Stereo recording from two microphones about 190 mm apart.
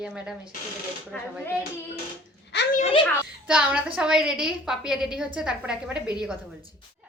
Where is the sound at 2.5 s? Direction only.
65° left (ahead or behind).